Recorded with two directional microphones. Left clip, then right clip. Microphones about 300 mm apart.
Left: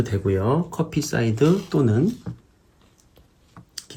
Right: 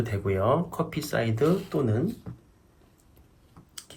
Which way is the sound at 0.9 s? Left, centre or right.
Left.